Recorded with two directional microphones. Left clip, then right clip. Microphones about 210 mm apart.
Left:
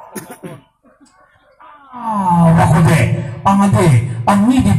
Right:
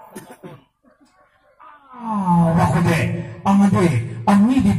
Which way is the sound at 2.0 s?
30° left (ahead or behind).